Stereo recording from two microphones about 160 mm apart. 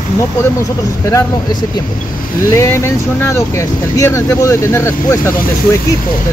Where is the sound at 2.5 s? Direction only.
15° left (ahead or behind).